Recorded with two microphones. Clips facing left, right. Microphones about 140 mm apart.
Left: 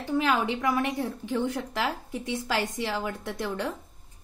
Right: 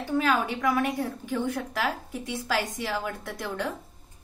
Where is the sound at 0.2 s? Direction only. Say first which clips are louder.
Even; 20° left (ahead or behind).